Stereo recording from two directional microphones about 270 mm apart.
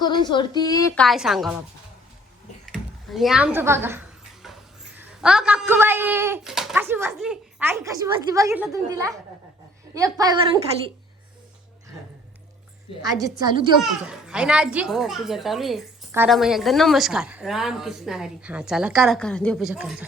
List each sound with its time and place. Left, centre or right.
0.0 s speech: centre
1.0 s a child's voice: centre
2.7 s speech: centre
4.4 s a sound: centre
4.9 s speech: centre
13.0 s speech: centre
13.8 s a child's voice: centre